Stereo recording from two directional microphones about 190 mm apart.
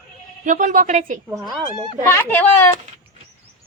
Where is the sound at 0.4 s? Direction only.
45° right (ahead or behind).